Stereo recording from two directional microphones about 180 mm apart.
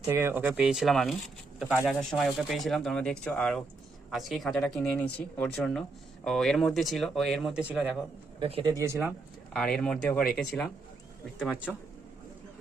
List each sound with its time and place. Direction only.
0.0 s speech: 15° right (ahead or behind)
8.4 s speech: 30° right (ahead or behind)
8.7 s speech: 15° right (ahead or behind)
9.0 s speech: centre (ahead or behind)